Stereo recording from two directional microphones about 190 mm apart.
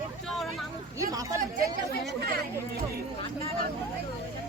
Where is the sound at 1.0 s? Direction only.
20° right (ahead or behind).